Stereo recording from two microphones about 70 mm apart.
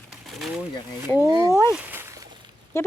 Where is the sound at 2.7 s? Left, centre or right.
Left.